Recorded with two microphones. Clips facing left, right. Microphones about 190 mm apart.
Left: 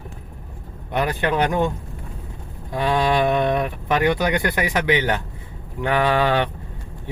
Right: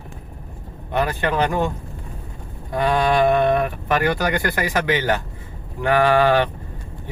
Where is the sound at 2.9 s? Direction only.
15° left (ahead or behind).